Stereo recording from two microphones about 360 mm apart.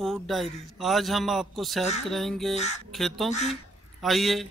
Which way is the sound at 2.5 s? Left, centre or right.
Centre.